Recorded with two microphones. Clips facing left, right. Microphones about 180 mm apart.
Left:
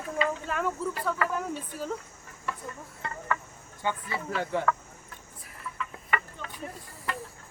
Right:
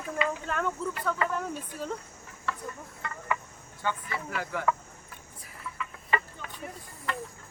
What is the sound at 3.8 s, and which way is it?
Speech, 25° left (ahead or behind).